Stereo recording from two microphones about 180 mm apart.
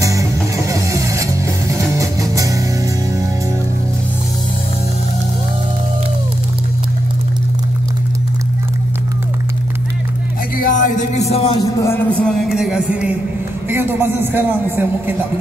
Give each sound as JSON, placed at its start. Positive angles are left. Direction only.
{"t": 0.0, "sound": "music", "side_deg": -15}
{"t": 10.6, "sound": "music", "side_deg": 45}
{"t": 11.5, "sound": "a sound", "side_deg": 15}
{"t": 13.7, "sound": "a man's voice", "side_deg": -10}